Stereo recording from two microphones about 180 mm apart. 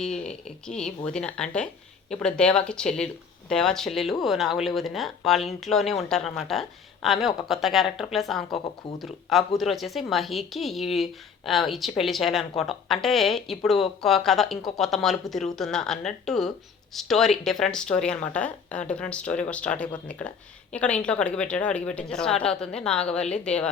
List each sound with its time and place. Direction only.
0.4 s speech: 5° left (ahead or behind)
8.4 s speech: 25° left (ahead or behind)
9.0 s speech: centre (ahead or behind)